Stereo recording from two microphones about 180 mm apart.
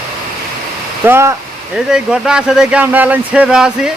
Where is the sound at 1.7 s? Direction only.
5° right (ahead or behind).